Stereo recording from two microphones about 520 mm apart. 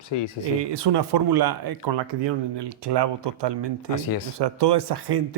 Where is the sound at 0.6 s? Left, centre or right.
Right.